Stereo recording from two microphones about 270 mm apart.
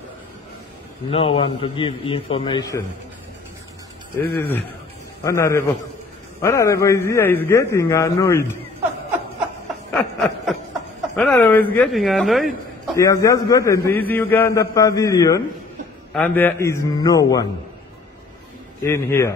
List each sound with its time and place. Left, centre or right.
1.1 s a man's voice: left
4.4 s a man's voice: centre
9.9 s snicker: centre
11.1 s speech: centre
12.9 s a man's voice: centre
18.8 s a man's voice: centre